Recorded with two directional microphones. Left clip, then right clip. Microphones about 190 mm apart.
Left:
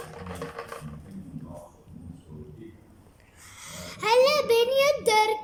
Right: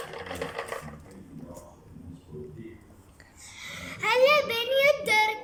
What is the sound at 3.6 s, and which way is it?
Child singing, 30° left (ahead or behind).